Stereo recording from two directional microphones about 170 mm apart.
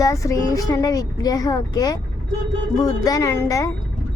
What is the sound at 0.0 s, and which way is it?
Speech, 20° left (ahead or behind).